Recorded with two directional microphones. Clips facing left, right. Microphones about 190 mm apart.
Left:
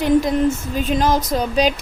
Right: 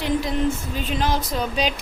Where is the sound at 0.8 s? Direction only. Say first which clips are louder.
Left 6 dB; 40° left (ahead or behind).